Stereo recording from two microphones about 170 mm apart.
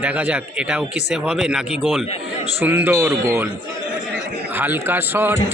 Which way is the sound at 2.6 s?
10° right (ahead or behind).